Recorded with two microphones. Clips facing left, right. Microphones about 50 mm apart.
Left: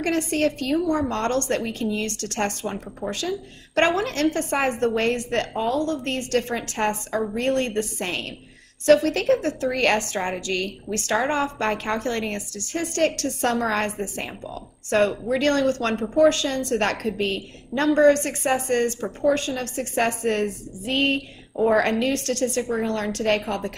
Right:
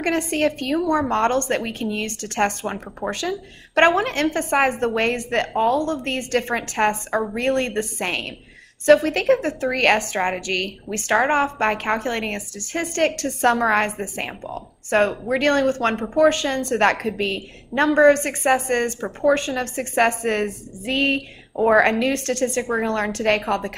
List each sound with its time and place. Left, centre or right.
0.0 s a woman's voice: right
5.6 s a woman's voice: right
9.7 s a woman's voice: right
9.9 s a woman's voice: right
10.9 s a woman's voice: right